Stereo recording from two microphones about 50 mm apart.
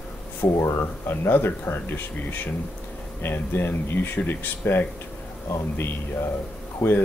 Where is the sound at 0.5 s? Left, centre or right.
Left.